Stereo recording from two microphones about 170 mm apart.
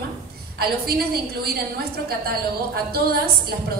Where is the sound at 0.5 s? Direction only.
65° right (ahead or behind).